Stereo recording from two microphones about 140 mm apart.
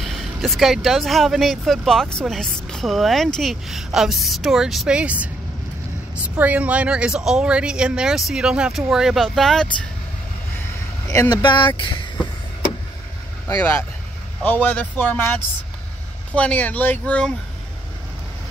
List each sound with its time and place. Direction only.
0.0 s speech: centre (ahead or behind)
11.1 s speech: 25° left (ahead or behind)
14.4 s speech: 10° left (ahead or behind)